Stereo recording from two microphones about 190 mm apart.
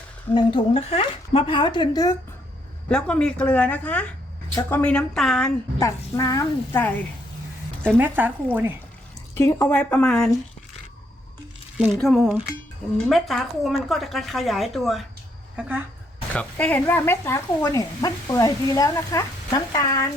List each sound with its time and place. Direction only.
0.3 s a woman's voice: 30° left (ahead or behind)
2.9 s a woman's voice: 5° left (ahead or behind)
5.8 s speech: 15° left (ahead or behind)
7.9 s speech: 10° right (ahead or behind)
9.3 s speech: 15° left (ahead or behind)
11.8 s a woman's voice: centre (ahead or behind)
16.3 s speech: 5° left (ahead or behind)